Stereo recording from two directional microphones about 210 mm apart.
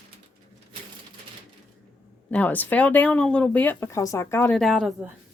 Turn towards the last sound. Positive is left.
turn(degrees=0)  # may be behind; listen again after turning